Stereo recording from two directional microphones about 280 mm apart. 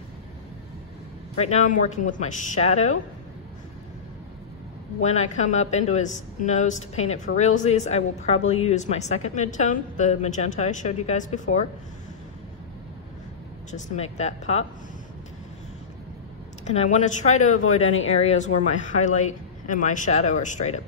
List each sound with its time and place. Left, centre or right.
1.3 s a woman's voice: left
5.0 s a woman's voice: left
13.7 s a woman's voice: left
16.6 s a woman's voice: left
17.7 s speech: left
18.1 s a woman's voice: left